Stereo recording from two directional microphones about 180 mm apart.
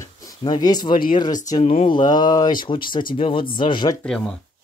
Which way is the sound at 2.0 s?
25° left (ahead or behind).